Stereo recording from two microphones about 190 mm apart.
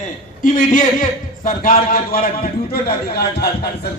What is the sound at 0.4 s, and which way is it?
A man's voice, 45° left (ahead or behind).